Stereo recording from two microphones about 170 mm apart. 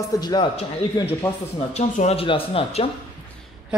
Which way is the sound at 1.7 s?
40° left (ahead or behind).